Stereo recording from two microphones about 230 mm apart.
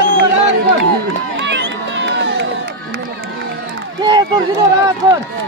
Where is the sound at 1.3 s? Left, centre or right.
Right.